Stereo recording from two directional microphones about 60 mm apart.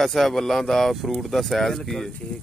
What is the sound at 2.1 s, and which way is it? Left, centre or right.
Speech, centre.